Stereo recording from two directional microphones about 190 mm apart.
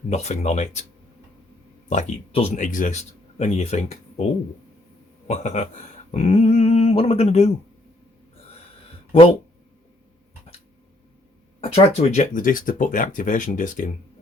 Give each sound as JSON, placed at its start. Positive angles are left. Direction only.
{"t": 0.1, "sound": "speech", "side_deg": 35}
{"t": 1.9, "sound": "speech", "side_deg": 35}
{"t": 5.3, "sound": "speech", "side_deg": 35}
{"t": 11.6, "sound": "speech", "side_deg": 35}